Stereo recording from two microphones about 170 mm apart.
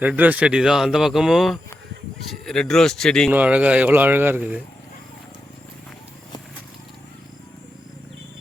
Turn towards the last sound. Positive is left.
turn(degrees=25)  # may be behind; listen again after turning